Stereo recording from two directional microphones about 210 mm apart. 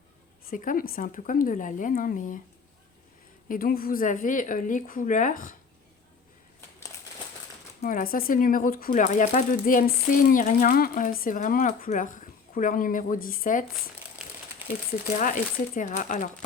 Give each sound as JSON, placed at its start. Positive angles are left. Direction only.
{"t": 0.5, "sound": "speech", "side_deg": 40}
{"t": 3.5, "sound": "speech", "side_deg": 45}
{"t": 7.8, "sound": "speech", "side_deg": 40}
{"t": 14.2, "sound": "crumpling", "side_deg": -5}
{"t": 15.2, "sound": "speech", "side_deg": 40}